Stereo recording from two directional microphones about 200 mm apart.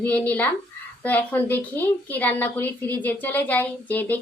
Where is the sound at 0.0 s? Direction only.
10° left (ahead or behind).